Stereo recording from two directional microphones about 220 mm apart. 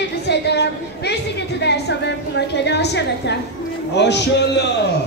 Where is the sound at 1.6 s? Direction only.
50° left (ahead or behind).